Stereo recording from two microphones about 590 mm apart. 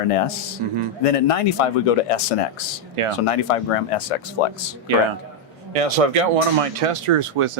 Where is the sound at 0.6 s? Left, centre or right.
Right.